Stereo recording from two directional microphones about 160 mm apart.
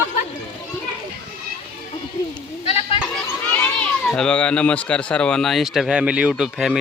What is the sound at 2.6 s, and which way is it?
Goat, 35° left (ahead or behind).